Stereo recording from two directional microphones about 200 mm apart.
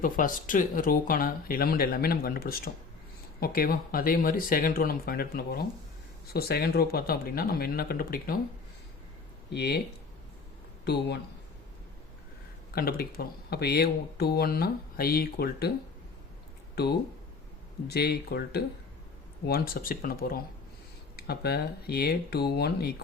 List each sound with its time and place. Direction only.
0.0 s speech: 45° left (ahead or behind)
9.5 s speech: 55° left (ahead or behind)
10.8 s speech: 55° left (ahead or behind)
12.7 s speech: 50° left (ahead or behind)
17.8 s speech: 55° left (ahead or behind)